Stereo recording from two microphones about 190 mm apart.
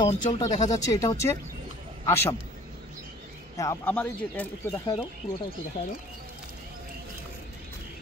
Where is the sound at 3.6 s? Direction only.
10° left (ahead or behind).